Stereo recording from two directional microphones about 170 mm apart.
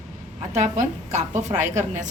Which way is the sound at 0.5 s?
45° right (ahead or behind).